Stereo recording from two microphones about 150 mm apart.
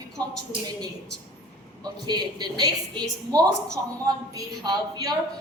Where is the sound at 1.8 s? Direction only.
30° right (ahead or behind).